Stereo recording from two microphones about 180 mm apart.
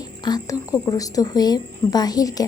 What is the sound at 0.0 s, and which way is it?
A woman's voice, 20° left (ahead or behind).